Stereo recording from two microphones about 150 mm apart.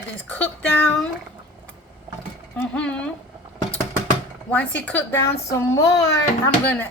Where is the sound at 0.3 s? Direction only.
10° left (ahead or behind).